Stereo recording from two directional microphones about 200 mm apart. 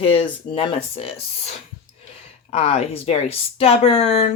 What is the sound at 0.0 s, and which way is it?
Speech, 25° left (ahead or behind).